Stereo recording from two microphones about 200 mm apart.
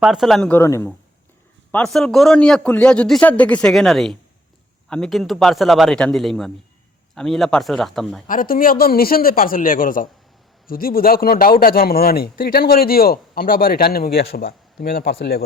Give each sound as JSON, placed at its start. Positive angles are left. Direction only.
{"t": 0.0, "sound": "a man's voice", "side_deg": 0}
{"t": 1.7, "sound": "a man's voice", "side_deg": 5}
{"t": 8.3, "sound": "a man's voice", "side_deg": 45}